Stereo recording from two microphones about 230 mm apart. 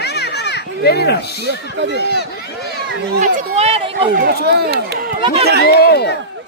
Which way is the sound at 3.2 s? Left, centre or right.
Right.